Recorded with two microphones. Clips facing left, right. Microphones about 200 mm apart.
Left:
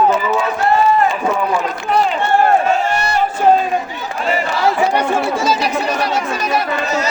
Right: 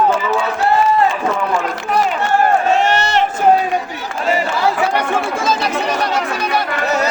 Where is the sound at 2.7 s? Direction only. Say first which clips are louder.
Right 2 dB; 85° right.